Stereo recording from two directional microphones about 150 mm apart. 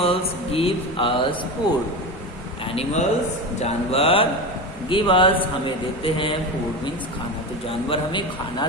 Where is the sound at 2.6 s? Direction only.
40° left (ahead or behind).